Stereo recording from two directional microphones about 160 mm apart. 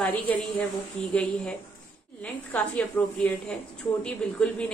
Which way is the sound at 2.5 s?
5° left (ahead or behind).